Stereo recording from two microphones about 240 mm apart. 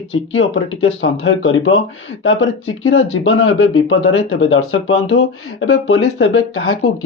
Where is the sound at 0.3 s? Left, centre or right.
Left.